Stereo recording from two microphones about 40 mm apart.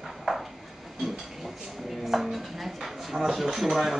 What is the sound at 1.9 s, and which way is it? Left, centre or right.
A man's voice, centre.